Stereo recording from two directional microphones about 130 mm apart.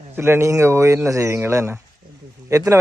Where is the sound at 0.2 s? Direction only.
20° right (ahead or behind).